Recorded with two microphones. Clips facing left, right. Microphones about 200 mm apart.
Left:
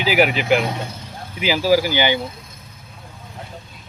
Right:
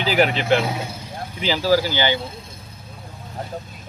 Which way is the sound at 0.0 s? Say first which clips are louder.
Left 1 dB; 10° left (ahead or behind).